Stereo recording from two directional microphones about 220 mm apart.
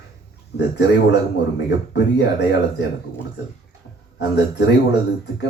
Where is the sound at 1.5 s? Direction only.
50° left (ahead or behind).